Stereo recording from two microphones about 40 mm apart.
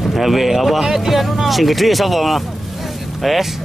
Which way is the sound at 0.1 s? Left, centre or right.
Centre.